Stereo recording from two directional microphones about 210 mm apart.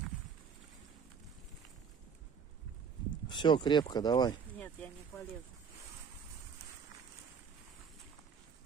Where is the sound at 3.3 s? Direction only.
20° left (ahead or behind).